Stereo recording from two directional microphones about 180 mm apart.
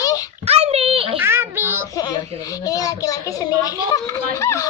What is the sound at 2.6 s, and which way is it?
Child singing, 20° left (ahead or behind).